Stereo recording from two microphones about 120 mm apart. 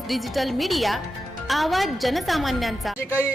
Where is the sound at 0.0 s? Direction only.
Centre (ahead or behind).